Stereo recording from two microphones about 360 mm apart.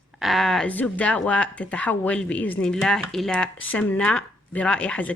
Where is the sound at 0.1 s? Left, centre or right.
Centre.